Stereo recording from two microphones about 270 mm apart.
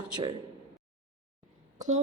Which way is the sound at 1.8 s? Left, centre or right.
Right.